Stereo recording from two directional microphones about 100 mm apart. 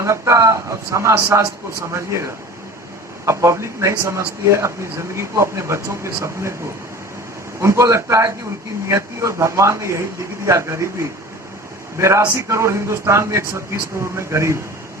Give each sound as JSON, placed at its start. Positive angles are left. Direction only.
{"t": 0.0, "sound": "speech", "side_deg": -30}
{"t": 7.6, "sound": "speech", "side_deg": -30}
{"t": 11.9, "sound": "speech", "side_deg": -30}